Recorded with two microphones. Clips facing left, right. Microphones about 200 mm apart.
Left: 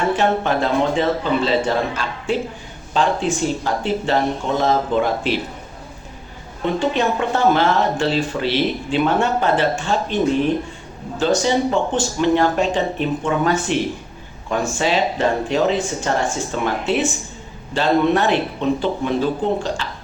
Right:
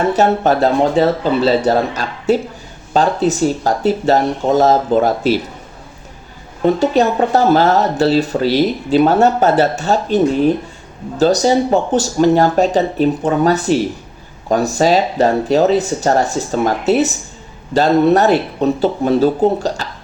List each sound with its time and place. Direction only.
0.1 s speech: 40° right (ahead or behind)
6.7 s speech: 40° right (ahead or behind)